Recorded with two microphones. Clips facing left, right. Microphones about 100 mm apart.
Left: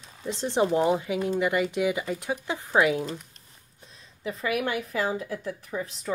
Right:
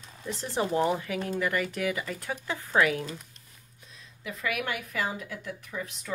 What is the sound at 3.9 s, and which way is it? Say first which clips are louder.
Speech: left 6 dB; 35° left (ahead or behind).